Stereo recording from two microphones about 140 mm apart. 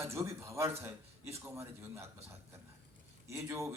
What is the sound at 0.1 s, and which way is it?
A man's voice, 20° right (ahead or behind).